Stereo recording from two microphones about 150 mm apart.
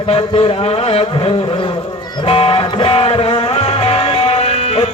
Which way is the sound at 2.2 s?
40° left (ahead or behind).